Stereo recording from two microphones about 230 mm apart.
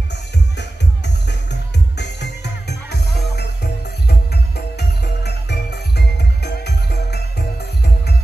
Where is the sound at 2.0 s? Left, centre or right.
Left.